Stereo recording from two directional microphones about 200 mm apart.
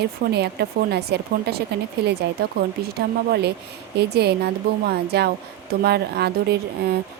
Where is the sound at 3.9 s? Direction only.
55° right (ahead or behind).